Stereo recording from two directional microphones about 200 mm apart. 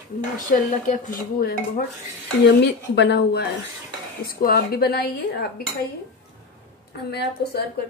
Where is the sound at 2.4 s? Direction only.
60° left (ahead or behind).